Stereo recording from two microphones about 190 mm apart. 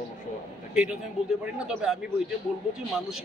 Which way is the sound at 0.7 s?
5° right (ahead or behind).